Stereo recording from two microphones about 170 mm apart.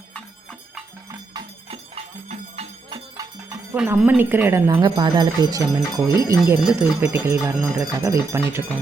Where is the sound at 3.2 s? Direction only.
20° right (ahead or behind).